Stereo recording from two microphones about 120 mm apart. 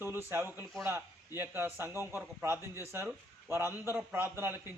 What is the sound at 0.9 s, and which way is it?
Speech, 20° right (ahead or behind).